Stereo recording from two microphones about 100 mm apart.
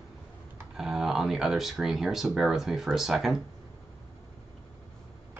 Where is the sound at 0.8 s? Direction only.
5° right (ahead or behind).